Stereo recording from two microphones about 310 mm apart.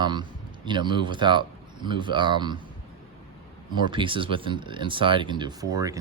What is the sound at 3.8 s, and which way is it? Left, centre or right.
Speech, centre.